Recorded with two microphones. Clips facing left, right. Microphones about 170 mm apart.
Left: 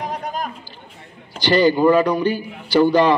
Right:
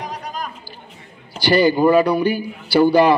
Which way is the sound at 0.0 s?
50° left (ahead or behind).